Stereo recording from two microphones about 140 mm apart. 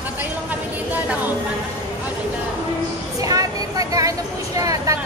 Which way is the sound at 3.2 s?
25° right (ahead or behind).